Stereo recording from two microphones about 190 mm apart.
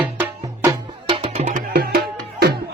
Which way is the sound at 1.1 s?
30° right (ahead or behind).